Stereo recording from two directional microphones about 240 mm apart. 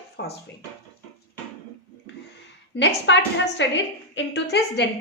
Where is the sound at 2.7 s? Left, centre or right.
Left.